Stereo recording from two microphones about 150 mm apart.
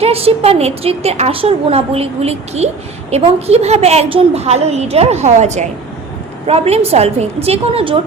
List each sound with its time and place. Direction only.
0.0 s a woman's voice: 40° right (ahead or behind)